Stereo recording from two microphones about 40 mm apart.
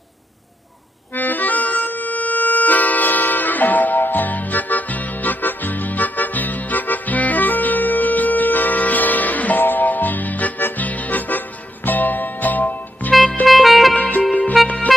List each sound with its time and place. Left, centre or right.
1.1 s accordion: left
1.8 s music: left
13.5 s music: centre
13.9 s music: left
14.6 s music: centre